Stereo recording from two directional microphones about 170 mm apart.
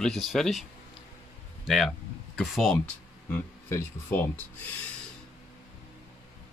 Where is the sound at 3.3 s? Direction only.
15° left (ahead or behind).